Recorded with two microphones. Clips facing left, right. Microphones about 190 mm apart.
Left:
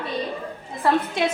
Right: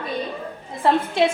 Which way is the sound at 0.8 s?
25° right (ahead or behind).